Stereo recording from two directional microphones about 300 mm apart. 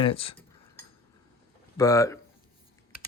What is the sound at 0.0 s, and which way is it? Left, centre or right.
Speech, centre.